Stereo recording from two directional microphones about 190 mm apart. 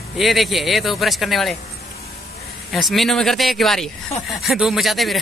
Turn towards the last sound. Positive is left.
turn(degrees=0)  # may be behind; listen again after turning